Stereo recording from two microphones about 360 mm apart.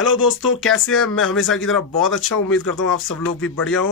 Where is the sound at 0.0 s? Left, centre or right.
Left.